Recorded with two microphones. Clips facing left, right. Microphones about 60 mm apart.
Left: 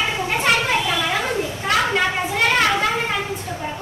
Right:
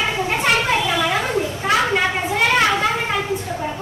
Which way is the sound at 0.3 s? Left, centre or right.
Centre.